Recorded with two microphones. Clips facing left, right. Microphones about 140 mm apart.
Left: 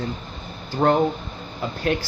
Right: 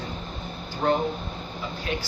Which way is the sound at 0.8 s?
65° left (ahead or behind).